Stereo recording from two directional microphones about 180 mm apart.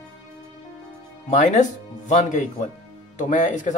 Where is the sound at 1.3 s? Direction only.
40° left (ahead or behind).